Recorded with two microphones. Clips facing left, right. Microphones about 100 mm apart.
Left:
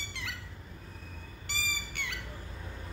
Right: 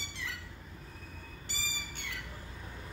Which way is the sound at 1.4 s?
75° left (ahead or behind).